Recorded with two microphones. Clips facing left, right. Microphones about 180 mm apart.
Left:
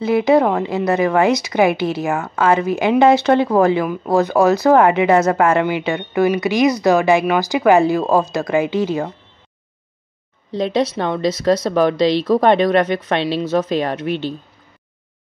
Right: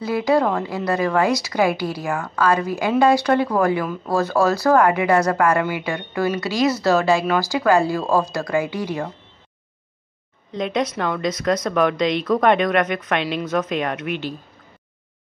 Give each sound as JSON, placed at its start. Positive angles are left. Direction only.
{"t": 0.0, "sound": "speech", "side_deg": 20}
{"t": 10.5, "sound": "speech", "side_deg": 30}